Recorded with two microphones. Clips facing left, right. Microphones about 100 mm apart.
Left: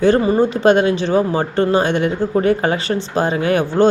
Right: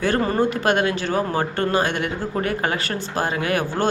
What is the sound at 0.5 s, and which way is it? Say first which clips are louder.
Speech: left 7 dB; 25° left (ahead or behind).